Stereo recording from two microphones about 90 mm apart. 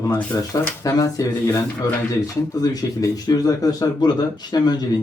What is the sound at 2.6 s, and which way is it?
Speech, 40° left (ahead or behind).